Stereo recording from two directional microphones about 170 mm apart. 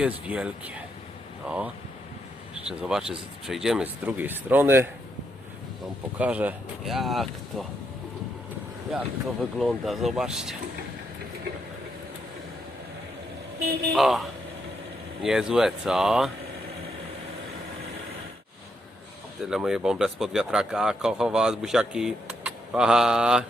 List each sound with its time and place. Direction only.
0.0 s speech: 5° right (ahead or behind)
6.1 s speech: 10° right (ahead or behind)
8.9 s speech: centre (ahead or behind)
13.6 s speech: 70° right (ahead or behind)
13.9 s speech: centre (ahead or behind)
19.4 s speech: centre (ahead or behind)